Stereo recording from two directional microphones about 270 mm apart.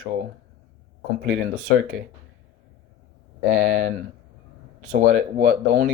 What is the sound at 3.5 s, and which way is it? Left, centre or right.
Speech, right.